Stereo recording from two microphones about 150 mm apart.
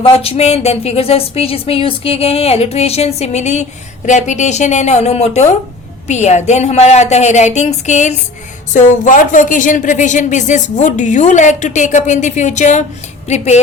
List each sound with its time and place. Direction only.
0.0 s a woman's voice: 40° left (ahead or behind)